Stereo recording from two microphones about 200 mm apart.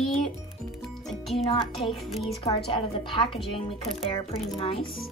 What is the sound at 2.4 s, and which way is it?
A woman's voice, 25° left (ahead or behind).